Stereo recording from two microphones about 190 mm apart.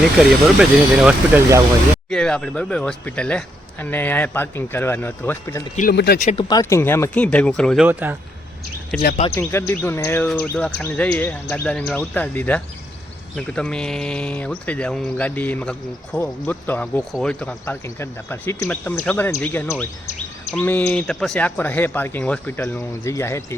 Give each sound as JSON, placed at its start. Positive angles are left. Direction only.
{"t": 0.2, "sound": "speech", "side_deg": -5}
{"t": 5.9, "sound": "speech", "side_deg": 60}
{"t": 6.5, "sound": "speech", "side_deg": 15}
{"t": 7.9, "sound": "speech", "side_deg": -10}
{"t": 9.0, "sound": "speech", "side_deg": 45}
{"t": 9.3, "sound": "speech", "side_deg": 15}